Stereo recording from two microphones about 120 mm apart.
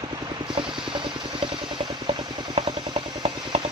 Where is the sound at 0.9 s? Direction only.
45° right (ahead or behind).